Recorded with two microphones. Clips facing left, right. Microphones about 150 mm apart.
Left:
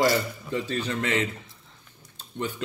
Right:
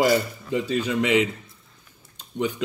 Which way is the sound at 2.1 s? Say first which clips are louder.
Right 5 dB; 15° right (ahead or behind).